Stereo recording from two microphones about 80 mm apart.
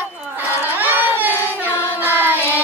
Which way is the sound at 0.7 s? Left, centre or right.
Right.